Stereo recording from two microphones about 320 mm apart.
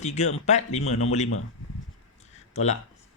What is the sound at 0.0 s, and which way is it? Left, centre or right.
Speech, left.